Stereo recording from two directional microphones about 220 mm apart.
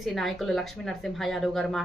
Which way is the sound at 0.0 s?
Centre (ahead or behind).